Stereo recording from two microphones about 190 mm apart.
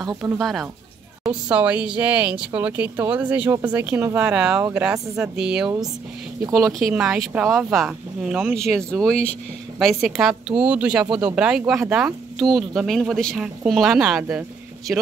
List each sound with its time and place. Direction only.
0.2 s speech: 5° right (ahead or behind)
6.9 s speech: 5° right (ahead or behind)